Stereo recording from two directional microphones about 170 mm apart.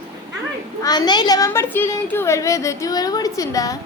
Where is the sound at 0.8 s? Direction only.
25° left (ahead or behind).